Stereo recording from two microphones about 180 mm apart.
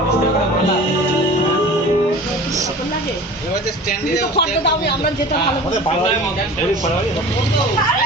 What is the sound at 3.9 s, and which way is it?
Speech, 65° left (ahead or behind).